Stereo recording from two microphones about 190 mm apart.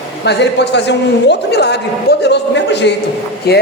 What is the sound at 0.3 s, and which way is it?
A woman's voice, 60° left (ahead or behind).